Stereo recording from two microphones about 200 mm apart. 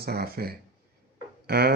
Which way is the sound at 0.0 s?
50° right (ahead or behind).